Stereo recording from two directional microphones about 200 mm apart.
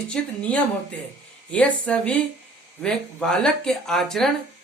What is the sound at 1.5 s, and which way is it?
A woman's voice, 5° left (ahead or behind).